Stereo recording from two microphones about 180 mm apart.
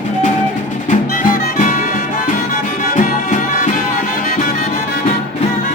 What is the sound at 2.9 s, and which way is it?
Music, 50° left (ahead or behind).